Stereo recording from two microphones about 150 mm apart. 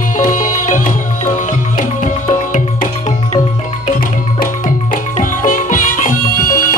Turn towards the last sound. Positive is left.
turn(degrees=65)  # may be behind; listen again after turning